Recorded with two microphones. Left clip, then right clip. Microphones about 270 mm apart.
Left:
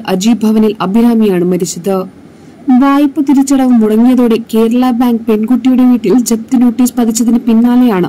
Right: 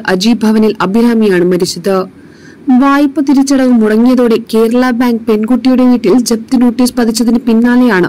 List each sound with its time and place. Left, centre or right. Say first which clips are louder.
0.0 s speech: right 2 dB; right